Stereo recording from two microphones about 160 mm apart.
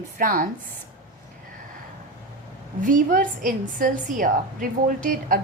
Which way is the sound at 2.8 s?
55° right (ahead or behind).